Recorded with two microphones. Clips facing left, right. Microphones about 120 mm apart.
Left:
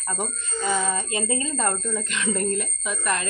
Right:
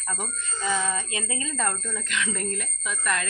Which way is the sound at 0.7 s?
35° left (ahead or behind).